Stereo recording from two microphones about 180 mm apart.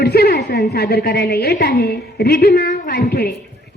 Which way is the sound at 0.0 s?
60° left (ahead or behind).